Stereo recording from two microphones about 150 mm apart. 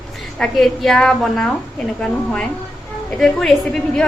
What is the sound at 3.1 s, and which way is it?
Speech, 5° left (ahead or behind).